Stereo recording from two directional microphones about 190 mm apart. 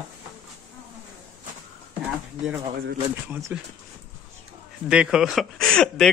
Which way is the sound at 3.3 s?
10° right (ahead or behind).